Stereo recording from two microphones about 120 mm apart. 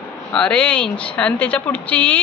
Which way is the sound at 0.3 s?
10° left (ahead or behind).